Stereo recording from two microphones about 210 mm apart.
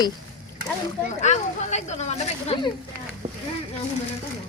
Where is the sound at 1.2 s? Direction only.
35° left (ahead or behind).